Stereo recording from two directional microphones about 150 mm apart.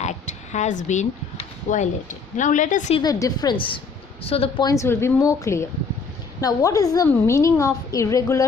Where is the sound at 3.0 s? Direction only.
25° left (ahead or behind).